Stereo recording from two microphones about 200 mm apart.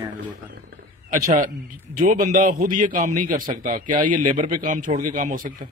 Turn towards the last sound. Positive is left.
turn(degrees=-40)  # may be behind; listen again after turning